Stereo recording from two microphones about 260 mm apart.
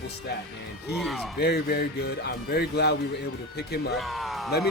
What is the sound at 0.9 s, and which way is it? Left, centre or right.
Speech, centre.